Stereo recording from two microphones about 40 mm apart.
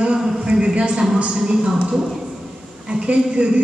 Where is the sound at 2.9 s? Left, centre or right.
Right.